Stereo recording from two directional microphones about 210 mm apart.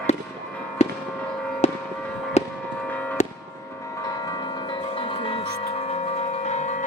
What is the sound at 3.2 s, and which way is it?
Fireworks, 35° left (ahead or behind).